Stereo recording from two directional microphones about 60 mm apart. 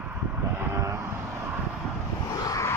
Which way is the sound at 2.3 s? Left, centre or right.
Left.